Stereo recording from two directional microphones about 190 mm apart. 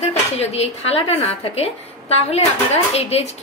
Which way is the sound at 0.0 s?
35° left (ahead or behind).